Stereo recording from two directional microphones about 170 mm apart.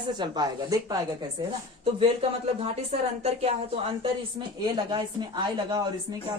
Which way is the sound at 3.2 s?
40° right (ahead or behind).